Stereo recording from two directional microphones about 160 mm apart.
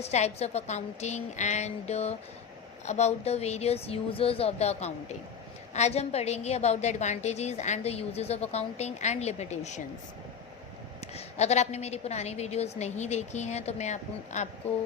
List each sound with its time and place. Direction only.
0.0 s a woman's voice: 40° left (ahead or behind)
11.0 s a woman's voice: 45° left (ahead or behind)